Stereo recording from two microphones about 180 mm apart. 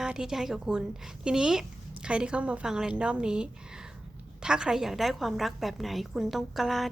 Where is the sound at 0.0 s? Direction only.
5° right (ahead or behind).